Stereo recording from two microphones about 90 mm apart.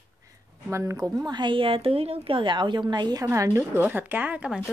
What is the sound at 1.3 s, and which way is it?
A woman's voice, 60° right (ahead or behind).